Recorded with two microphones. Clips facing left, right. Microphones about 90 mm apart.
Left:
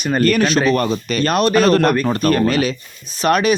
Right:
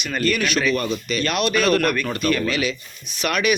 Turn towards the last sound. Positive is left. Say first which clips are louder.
# left 6 dB
turn(degrees=35)  # may be behind; listen again after turning